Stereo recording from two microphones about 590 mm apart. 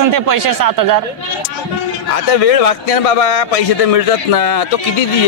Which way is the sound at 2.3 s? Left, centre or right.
Left.